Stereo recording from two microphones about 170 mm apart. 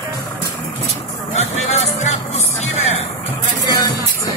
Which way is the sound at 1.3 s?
40° left (ahead or behind).